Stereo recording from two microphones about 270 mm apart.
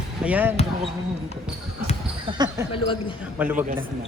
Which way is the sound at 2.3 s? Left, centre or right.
Centre.